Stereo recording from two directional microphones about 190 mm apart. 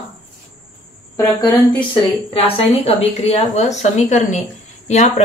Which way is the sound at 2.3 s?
30° left (ahead or behind).